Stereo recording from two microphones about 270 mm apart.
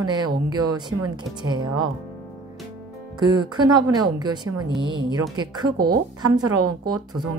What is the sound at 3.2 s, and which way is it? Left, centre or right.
A woman's voice, centre.